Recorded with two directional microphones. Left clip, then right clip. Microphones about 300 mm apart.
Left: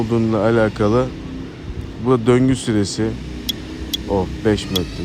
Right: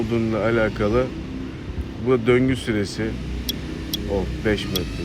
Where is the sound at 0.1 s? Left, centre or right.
Centre.